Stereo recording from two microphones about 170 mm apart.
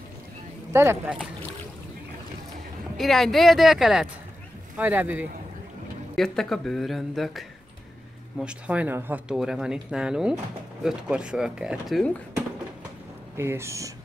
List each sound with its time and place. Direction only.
0.7 s speech: 10° right (ahead or behind)
3.0 s speech: centre (ahead or behind)
6.1 s speech: centre (ahead or behind)
13.4 s speech: 15° right (ahead or behind)